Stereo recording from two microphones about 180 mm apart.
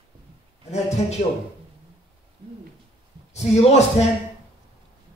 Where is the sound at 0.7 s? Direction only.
40° left (ahead or behind).